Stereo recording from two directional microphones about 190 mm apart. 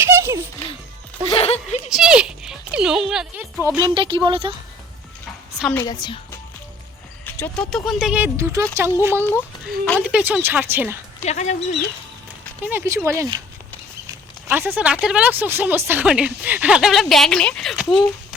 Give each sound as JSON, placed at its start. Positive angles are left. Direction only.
{"t": 0.0, "sound": "music", "side_deg": -15}
{"t": 1.3, "sound": "speech", "side_deg": 30}
{"t": 1.9, "sound": "a woman's voice", "side_deg": -5}
{"t": 3.9, "sound": "speech", "side_deg": -25}
{"t": 5.7, "sound": "a woman's voice", "side_deg": 20}
{"t": 7.3, "sound": "a sound", "side_deg": 10}
{"t": 7.7, "sound": "speech", "side_deg": 0}
{"t": 9.6, "sound": "speech", "side_deg": 10}
{"t": 10.0, "sound": "speech", "side_deg": -5}
{"t": 11.2, "sound": "speech", "side_deg": 35}
{"t": 12.6, "sound": "speech", "side_deg": -15}
{"t": 14.1, "sound": "a sound", "side_deg": -15}
{"t": 15.0, "sound": "a woman's voice", "side_deg": -5}